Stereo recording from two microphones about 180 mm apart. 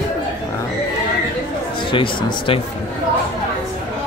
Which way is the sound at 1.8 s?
30° left (ahead or behind).